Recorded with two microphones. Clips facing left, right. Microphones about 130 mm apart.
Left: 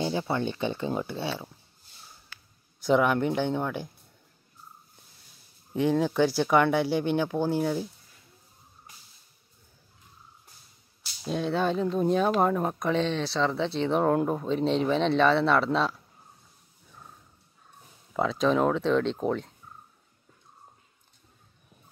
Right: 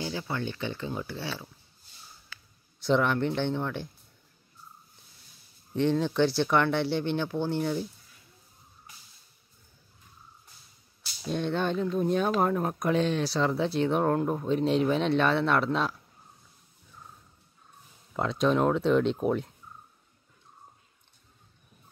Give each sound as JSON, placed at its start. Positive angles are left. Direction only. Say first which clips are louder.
{"t": 0.0, "sound": "speech", "louder": "left 5 dB", "side_deg": 25}
{"t": 2.9, "sound": "speech", "louder": "left 2 dB", "side_deg": 10}
{"t": 5.8, "sound": "speech", "louder": "left 1 dB", "side_deg": 10}
{"t": 11.2, "sound": "speech", "louder": "left 2 dB", "side_deg": 5}
{"t": 18.1, "sound": "speech", "louder": "left 1 dB", "side_deg": 0}